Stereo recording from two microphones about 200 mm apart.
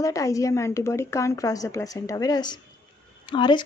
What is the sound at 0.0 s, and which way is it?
A woman's voice, 15° left (ahead or behind).